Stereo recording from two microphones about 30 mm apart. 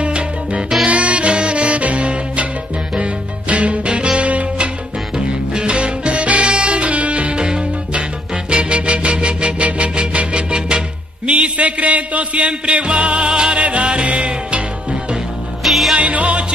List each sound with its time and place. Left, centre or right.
0.0 s salsa music: right
0.8 s music: right
5.1 s music: right
7.3 s music: right
8.5 s music: right
13.6 s music: right
15.6 s music: centre
16.0 s music: right